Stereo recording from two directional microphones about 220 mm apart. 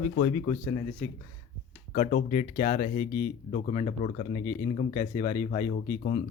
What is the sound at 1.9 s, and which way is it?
Speech, 35° left (ahead or behind).